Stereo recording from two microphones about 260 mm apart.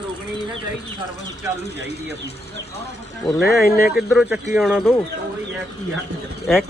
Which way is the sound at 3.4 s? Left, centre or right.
Left.